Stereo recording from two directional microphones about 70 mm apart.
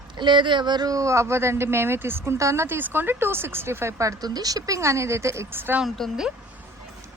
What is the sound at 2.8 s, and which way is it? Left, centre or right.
Speech, right.